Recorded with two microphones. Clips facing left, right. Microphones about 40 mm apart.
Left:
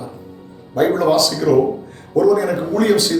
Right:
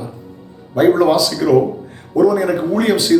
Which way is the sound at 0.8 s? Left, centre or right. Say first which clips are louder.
Right 3 dB; centre.